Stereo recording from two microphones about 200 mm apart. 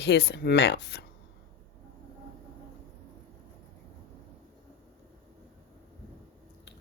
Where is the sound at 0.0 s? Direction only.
55° left (ahead or behind).